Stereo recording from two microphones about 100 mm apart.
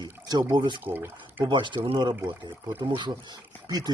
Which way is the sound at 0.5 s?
50° right (ahead or behind).